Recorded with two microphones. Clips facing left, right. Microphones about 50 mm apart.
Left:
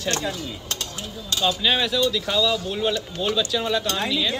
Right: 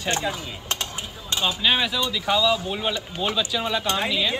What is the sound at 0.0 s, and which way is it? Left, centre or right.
Speech, right.